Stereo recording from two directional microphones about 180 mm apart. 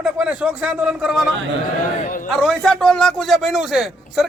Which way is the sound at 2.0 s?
45° left (ahead or behind).